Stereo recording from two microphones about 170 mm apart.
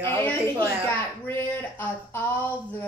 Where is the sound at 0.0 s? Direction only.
10° left (ahead or behind).